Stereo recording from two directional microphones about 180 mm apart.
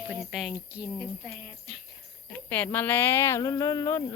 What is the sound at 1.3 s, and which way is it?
Speech, 30° right (ahead or behind).